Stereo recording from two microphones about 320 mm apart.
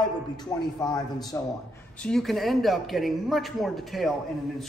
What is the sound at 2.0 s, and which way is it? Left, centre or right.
A man's voice, centre.